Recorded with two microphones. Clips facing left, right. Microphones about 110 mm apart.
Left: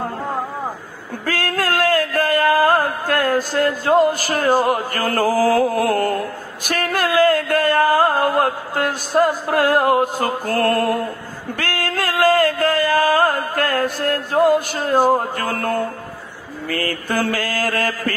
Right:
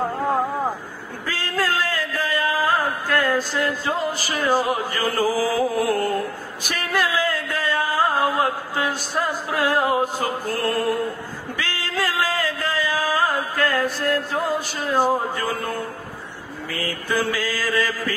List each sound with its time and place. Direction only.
1.2 s music: 55° left (ahead or behind)
4.9 s mantra: 60° left (ahead or behind)
11.5 s music: 55° left (ahead or behind)
14.8 s mantra: 55° left (ahead or behind)